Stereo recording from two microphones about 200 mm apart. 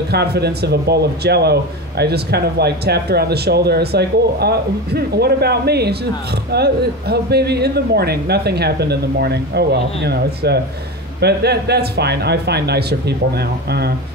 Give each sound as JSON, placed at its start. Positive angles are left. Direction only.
{"t": 0.1, "sound": "speech", "side_deg": -55}